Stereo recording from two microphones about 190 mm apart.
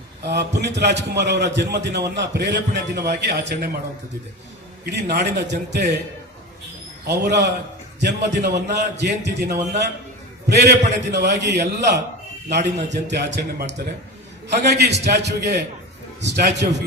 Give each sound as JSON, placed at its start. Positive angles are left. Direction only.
{"t": 0.2, "sound": "a man's voice", "side_deg": -60}
{"t": 4.9, "sound": "a man's voice", "side_deg": -60}
{"t": 7.0, "sound": "a man's voice", "side_deg": -60}